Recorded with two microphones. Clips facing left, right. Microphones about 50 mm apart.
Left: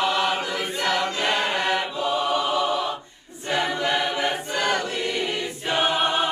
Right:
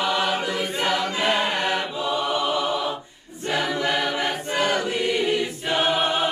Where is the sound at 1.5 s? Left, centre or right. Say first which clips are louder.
Left 1 dB; centre.